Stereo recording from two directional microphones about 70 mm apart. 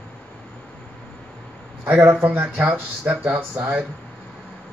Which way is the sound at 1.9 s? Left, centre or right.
Right.